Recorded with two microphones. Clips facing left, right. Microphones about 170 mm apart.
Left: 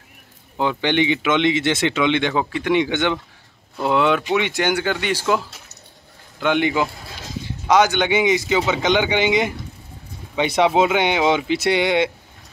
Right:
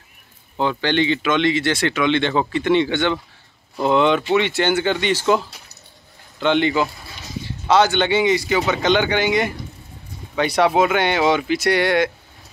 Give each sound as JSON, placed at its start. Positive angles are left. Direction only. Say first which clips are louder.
{"t": 0.6, "sound": "speech", "louder": "even", "side_deg": 15}
{"t": 3.7, "sound": "speech", "louder": "right 2 dB", "side_deg": 5}
{"t": 6.4, "sound": "speech", "louder": "right 1 dB", "side_deg": 10}
{"t": 10.6, "sound": "speech", "louder": "even", "side_deg": 20}